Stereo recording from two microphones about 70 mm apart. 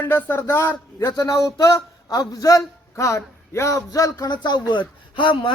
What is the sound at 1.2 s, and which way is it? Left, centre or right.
A man's voice, left.